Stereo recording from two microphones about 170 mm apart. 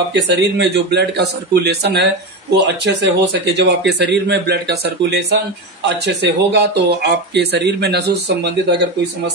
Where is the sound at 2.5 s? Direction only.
90° right.